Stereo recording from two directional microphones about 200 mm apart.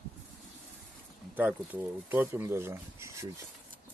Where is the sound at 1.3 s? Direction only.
10° right (ahead or behind).